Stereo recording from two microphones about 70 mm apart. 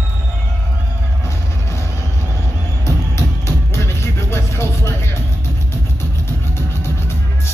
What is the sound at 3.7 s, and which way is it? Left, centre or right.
Music, left.